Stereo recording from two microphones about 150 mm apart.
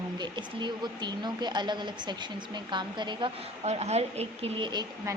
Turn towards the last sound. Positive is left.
turn(degrees=-30)  # may be behind; listen again after turning